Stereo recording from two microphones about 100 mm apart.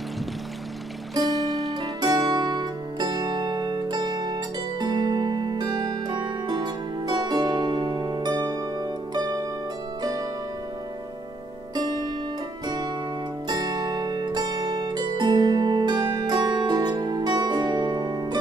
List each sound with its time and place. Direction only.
1.4 s music: centre (ahead or behind)
1.7 s music: 40° right (ahead or behind)
11.7 s zither: 40° right (ahead or behind)
12.6 s music: 45° right (ahead or behind)
13.5 s zither: 40° right (ahead or behind)